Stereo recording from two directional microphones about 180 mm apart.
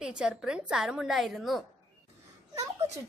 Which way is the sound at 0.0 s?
5° right (ahead or behind).